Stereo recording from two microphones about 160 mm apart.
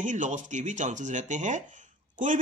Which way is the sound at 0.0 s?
50° right (ahead or behind).